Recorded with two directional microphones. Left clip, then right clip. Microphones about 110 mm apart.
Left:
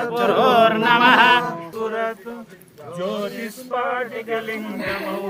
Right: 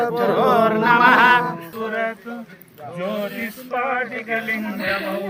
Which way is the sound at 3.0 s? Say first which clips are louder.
Even; 35° left (ahead or behind).